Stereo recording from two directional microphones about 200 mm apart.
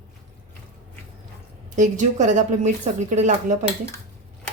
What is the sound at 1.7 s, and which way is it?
A woman's voice, 40° right (ahead or behind).